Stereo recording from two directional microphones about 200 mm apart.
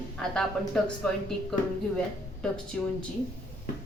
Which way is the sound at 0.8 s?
5° left (ahead or behind).